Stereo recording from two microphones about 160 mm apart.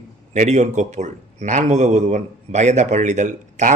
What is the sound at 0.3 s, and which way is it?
Speech, 45° right (ahead or behind).